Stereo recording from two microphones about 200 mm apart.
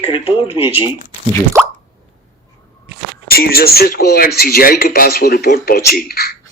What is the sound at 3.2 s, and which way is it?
A man's voice, 50° left (ahead or behind).